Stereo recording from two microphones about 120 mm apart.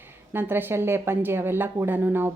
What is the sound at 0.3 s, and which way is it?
Speech, 20° right (ahead or behind).